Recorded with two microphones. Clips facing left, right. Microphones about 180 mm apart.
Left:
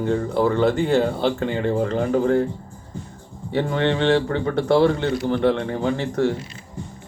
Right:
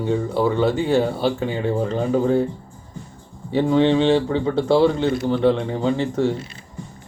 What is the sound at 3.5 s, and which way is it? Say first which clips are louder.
A man's voice: right 5 dB; 10° right (ahead or behind).